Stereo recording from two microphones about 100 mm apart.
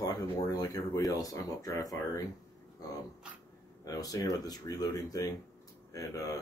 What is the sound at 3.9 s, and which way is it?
Speech, 35° left (ahead or behind).